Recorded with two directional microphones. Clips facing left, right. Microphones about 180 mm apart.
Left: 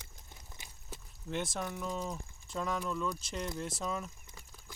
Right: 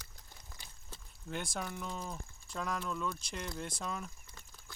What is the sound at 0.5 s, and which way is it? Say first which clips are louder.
Walk: left 2 dB; 20° left (ahead or behind).